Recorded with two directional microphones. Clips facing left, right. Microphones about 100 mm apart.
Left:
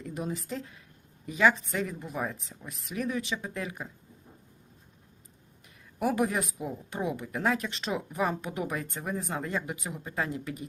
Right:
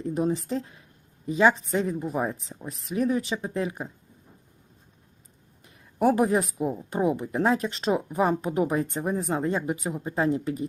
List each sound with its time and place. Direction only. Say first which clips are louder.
0.0 s speech: right 9 dB; 35° right (ahead or behind)
5.6 s speech: right 7 dB; 30° right (ahead or behind)